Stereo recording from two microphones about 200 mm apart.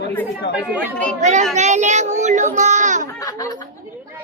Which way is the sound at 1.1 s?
35° right (ahead or behind).